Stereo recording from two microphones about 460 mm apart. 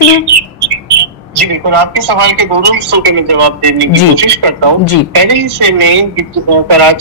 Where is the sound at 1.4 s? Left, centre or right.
Right.